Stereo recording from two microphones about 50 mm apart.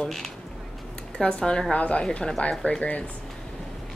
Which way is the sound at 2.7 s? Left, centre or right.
Left.